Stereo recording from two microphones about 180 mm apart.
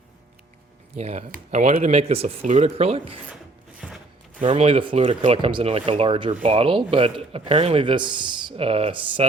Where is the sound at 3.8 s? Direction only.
Centre (ahead or behind).